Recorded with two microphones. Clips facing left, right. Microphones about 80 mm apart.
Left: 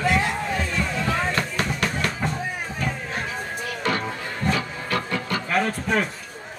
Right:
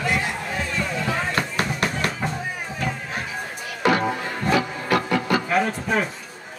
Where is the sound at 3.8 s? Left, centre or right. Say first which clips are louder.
Right 7 dB; centre.